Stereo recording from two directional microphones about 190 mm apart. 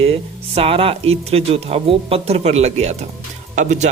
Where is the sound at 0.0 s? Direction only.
30° right (ahead or behind).